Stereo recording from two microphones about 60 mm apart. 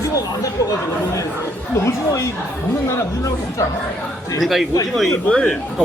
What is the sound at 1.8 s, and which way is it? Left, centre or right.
Speech, left.